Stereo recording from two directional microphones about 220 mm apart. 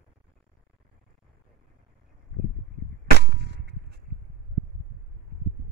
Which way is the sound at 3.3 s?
50° right (ahead or behind).